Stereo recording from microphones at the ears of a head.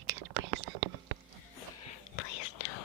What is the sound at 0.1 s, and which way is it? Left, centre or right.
Whispering, right.